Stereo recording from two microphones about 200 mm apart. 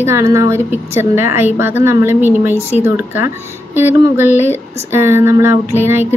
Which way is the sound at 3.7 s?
10° right (ahead or behind).